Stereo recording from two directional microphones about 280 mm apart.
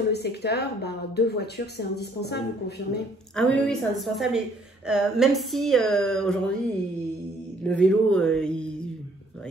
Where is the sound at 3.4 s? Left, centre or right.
Centre.